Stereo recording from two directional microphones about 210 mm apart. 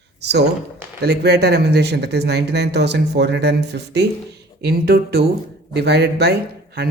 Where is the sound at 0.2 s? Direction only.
55° right (ahead or behind).